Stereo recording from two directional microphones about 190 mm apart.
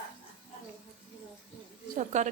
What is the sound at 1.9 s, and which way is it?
Speech, 40° right (ahead or behind).